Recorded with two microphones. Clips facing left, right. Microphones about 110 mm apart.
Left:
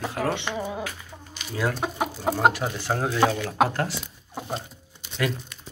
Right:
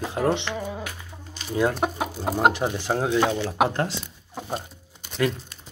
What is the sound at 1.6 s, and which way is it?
Speech, 25° right (ahead or behind).